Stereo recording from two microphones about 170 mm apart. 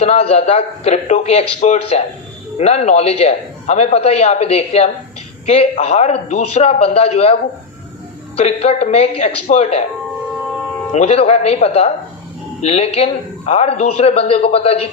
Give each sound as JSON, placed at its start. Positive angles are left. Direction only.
{"t": 0.0, "sound": "a man's voice", "side_deg": 35}
{"t": 8.4, "sound": "a man's voice", "side_deg": 40}
{"t": 10.9, "sound": "a man's voice", "side_deg": 35}